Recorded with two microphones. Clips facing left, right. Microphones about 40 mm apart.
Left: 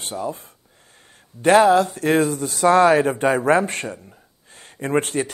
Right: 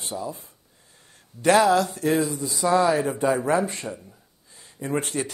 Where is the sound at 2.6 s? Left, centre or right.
Left.